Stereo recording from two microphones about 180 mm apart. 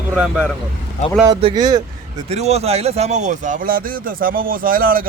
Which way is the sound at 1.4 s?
25° right (ahead or behind).